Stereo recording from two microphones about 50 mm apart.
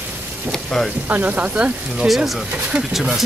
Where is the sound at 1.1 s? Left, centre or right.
Right.